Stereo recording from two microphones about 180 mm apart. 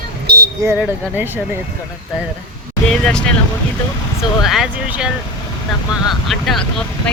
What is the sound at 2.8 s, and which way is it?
Speech, 5° left (ahead or behind).